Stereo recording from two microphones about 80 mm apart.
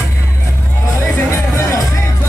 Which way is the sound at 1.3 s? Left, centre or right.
Left.